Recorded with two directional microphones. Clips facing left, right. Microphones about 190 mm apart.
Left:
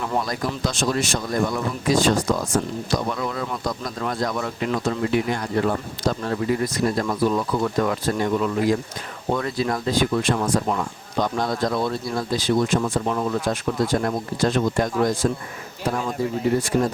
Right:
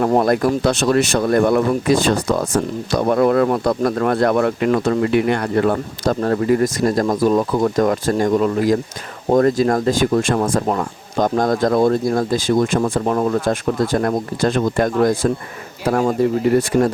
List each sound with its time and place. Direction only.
0.0 s speech: 55° right (ahead or behind)
15.9 s speech: 65° right (ahead or behind)